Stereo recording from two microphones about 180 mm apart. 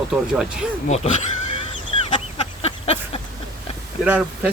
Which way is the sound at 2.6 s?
35° left (ahead or behind).